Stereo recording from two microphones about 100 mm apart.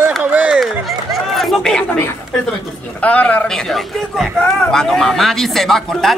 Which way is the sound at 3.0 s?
15° left (ahead or behind).